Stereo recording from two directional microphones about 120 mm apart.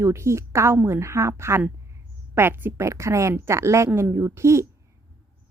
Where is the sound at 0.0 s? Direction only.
25° right (ahead or behind).